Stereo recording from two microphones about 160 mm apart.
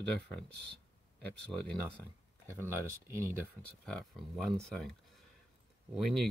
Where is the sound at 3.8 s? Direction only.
5° left (ahead or behind).